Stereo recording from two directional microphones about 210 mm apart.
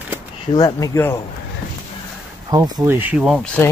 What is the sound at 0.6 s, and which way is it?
Speech, 15° left (ahead or behind).